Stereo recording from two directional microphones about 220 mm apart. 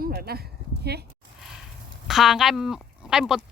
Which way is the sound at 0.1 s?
45° right (ahead or behind).